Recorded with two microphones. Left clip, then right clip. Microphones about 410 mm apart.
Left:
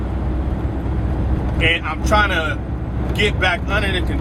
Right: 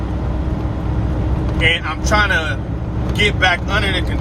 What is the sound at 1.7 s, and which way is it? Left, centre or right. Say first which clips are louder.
Speech: left 2 dB; right.